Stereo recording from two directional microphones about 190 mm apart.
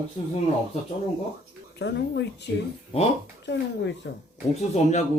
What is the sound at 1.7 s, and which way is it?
Speech, 65° left (ahead or behind).